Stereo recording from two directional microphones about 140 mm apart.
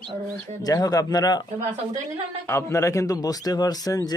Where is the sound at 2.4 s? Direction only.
20° left (ahead or behind).